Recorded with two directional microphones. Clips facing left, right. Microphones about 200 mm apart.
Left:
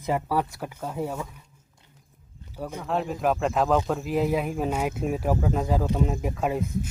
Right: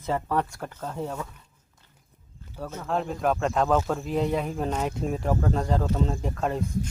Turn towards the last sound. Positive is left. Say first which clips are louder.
# left 1 dB
turn(degrees=10)  # may be behind; listen again after turning